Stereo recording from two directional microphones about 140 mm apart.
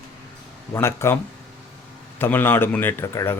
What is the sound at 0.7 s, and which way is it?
Speech, 20° left (ahead or behind).